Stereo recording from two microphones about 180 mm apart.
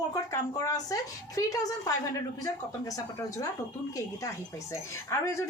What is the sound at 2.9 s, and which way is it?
Speech, 20° left (ahead or behind).